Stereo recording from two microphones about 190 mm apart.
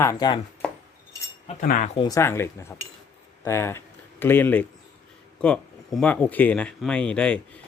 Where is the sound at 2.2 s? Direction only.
15° left (ahead or behind).